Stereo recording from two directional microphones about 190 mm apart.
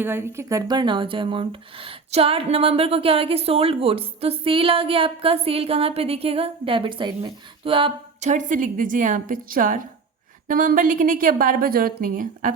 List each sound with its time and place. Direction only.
0.0 s a woman's voice: 10° right (ahead or behind); by 12.5 s 45° right (ahead or behind)